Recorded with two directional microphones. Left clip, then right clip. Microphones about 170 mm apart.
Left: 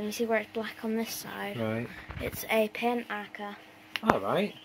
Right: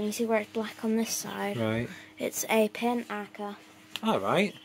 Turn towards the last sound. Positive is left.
turn(degrees=-25)  # may be behind; listen again after turning